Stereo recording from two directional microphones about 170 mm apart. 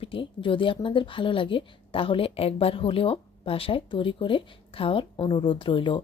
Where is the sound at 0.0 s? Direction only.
30° left (ahead or behind).